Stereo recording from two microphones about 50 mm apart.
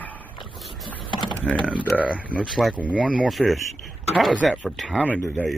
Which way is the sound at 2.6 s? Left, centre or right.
Centre.